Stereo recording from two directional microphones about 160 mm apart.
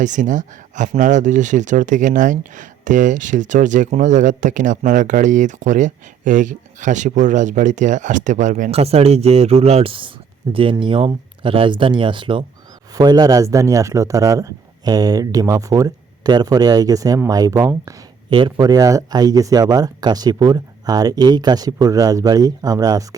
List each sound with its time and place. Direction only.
0.0 s speech: 50° right (ahead or behind); by 23.0 s 25° right (ahead or behind)